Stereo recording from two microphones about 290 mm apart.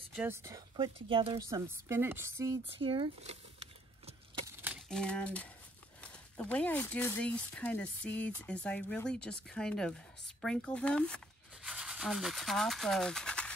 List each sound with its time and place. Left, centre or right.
0.1 s speech: centre
1.7 s speech: centre
4.5 s a sound: centre
5.9 s speech: centre